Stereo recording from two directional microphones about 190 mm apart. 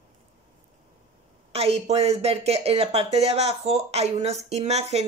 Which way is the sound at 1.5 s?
30° right (ahead or behind).